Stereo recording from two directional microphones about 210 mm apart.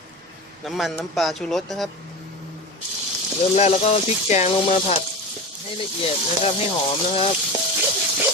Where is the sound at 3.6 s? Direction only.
30° left (ahead or behind).